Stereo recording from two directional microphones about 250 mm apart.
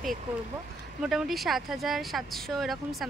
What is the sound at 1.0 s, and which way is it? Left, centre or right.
Speech, centre.